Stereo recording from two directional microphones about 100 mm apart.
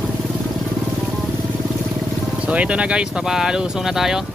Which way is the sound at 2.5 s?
15° right (ahead or behind).